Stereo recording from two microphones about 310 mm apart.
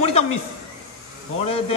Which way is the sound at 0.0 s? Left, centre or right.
Centre.